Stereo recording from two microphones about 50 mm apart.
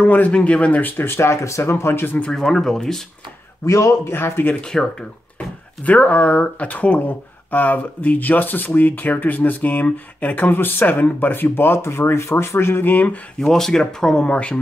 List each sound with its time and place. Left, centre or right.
0.0 s speech: left
1.1 s speech: left
2.3 s speech: centre
3.6 s a man's voice: left
4.1 s speech: left
4.6 s speech: centre
5.9 s speech: left
12.8 s speech: left
13.4 s speech: centre